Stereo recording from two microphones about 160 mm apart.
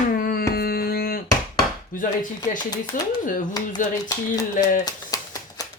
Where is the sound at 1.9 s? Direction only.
60° left (ahead or behind).